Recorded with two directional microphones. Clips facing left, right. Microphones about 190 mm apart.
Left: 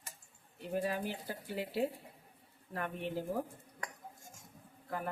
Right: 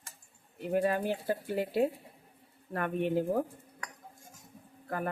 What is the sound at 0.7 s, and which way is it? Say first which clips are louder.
Speech: right 7 dB; 60° right (ahead or behind).